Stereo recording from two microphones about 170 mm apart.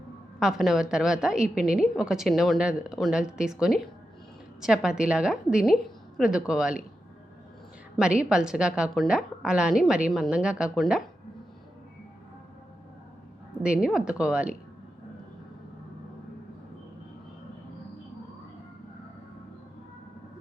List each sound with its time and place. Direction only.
0.3 s a woman's voice: centre (ahead or behind)
7.9 s a woman's voice: 5° right (ahead or behind)
13.6 s a woman's voice: 5° right (ahead or behind)